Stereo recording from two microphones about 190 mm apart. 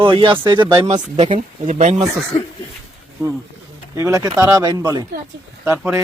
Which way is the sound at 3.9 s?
15° right (ahead or behind).